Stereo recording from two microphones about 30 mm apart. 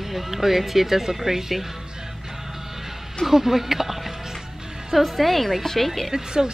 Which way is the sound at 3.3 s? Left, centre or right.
Centre.